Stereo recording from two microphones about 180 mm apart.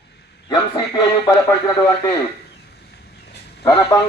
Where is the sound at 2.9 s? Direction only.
65° left (ahead or behind).